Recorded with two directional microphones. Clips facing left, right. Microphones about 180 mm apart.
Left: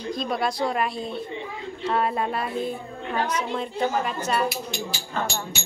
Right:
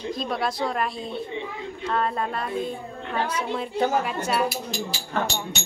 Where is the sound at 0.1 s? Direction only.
Centre (ahead or behind).